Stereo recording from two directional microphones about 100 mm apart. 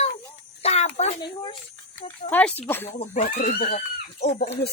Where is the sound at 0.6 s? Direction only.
90° left.